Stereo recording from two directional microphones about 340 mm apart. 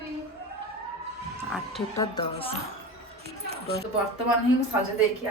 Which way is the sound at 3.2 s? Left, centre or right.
Right.